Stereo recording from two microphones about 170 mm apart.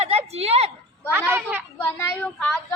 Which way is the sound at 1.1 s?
10° right (ahead or behind).